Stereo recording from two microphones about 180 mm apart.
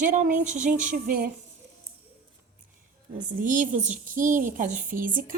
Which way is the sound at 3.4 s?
45° right (ahead or behind).